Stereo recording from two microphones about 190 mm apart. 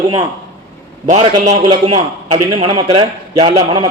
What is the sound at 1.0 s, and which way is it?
Speech, 40° right (ahead or behind).